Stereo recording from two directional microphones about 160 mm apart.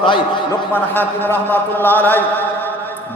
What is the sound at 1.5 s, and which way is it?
Chant, 10° left (ahead or behind).